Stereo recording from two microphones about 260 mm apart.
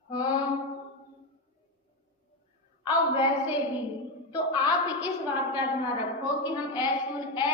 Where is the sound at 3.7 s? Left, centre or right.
Centre.